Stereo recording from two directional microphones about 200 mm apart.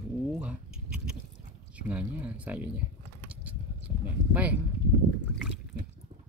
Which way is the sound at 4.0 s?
5° right (ahead or behind).